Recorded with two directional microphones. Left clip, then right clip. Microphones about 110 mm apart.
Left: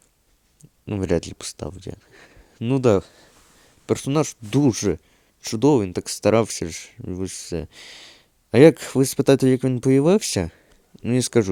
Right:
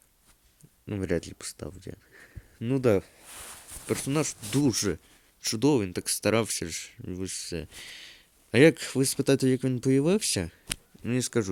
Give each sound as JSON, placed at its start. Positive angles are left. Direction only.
{"t": 0.9, "sound": "speech", "side_deg": 40}
{"t": 2.6, "sound": "speech", "side_deg": 35}
{"t": 2.8, "sound": "speech", "side_deg": 50}
{"t": 5.4, "sound": "speech", "side_deg": 45}